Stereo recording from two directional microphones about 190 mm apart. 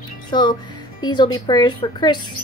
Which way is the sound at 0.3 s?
25° left (ahead or behind).